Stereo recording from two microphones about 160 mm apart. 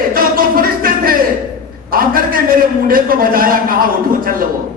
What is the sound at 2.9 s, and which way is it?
Speech, 60° right (ahead or behind).